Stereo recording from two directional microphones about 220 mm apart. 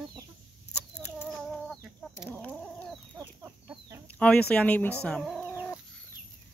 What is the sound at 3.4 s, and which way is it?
Chicken, 10° right (ahead or behind).